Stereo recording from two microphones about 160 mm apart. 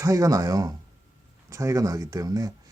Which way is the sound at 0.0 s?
20° right (ahead or behind).